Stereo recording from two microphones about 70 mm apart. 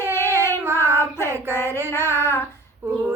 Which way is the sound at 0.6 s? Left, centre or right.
Right.